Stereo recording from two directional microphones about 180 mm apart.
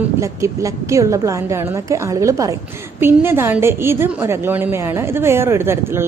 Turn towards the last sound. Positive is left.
turn(degrees=-15)  # may be behind; listen again after turning